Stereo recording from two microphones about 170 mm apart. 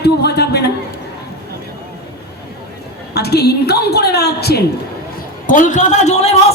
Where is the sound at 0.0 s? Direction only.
75° left (ahead or behind).